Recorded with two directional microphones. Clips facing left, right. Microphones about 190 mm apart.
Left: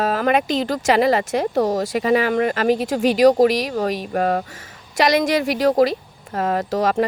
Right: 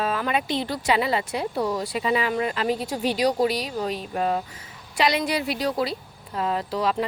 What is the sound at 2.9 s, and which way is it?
Speech, 90° left.